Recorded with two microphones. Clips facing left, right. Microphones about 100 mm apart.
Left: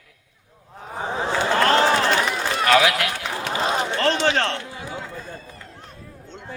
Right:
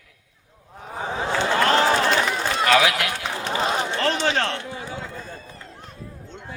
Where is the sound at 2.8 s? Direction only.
25° right (ahead or behind).